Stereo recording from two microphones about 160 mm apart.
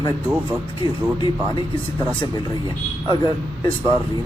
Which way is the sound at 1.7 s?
10° left (ahead or behind).